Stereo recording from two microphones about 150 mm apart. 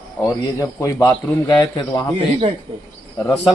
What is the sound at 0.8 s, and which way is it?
A man's voice, 20° left (ahead or behind).